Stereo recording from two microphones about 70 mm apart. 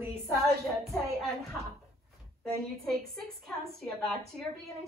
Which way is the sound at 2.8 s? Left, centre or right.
Centre.